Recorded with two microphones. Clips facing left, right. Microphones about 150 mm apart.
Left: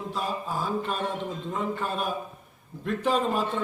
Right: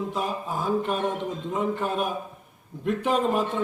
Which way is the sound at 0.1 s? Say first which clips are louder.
Right 2 dB; 20° right (ahead or behind).